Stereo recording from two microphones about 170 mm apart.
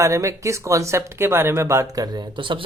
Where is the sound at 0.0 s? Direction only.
20° right (ahead or behind).